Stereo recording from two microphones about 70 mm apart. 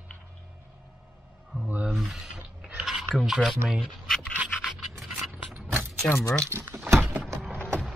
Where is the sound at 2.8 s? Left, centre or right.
Centre.